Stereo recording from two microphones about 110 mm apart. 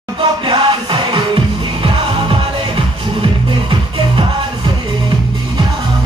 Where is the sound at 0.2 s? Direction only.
50° right (ahead or behind).